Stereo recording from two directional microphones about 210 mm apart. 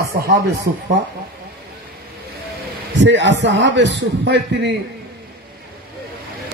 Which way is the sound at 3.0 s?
60° right (ahead or behind).